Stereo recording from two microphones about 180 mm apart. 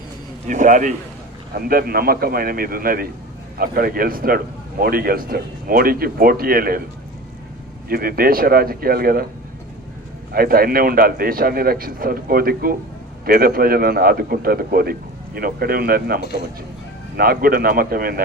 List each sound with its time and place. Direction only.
0.4 s a man's voice: 45° right (ahead or behind)
1.5 s a man's voice: 55° right (ahead or behind)
7.9 s a man's voice: 55° right (ahead or behind)
10.3 s a man's voice: 55° right (ahead or behind)